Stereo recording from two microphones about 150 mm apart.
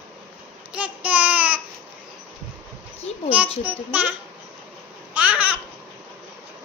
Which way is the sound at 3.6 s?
10° right (ahead or behind).